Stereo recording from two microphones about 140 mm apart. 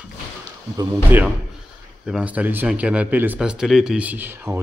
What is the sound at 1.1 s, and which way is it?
Speech, 15° right (ahead or behind).